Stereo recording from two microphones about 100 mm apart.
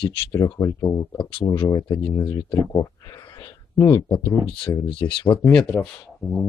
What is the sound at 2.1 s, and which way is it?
Speech, 30° left (ahead or behind).